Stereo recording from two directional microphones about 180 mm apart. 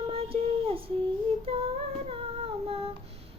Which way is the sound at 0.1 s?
30° right (ahead or behind).